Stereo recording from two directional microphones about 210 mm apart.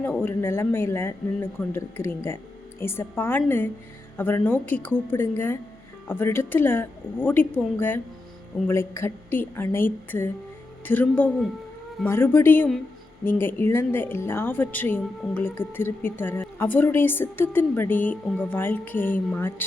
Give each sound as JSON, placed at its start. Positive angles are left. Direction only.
{"t": 0.0, "sound": "speech", "side_deg": 10}